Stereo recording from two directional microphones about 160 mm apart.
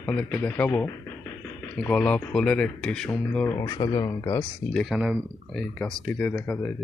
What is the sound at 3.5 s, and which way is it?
Speech, 25° left (ahead or behind).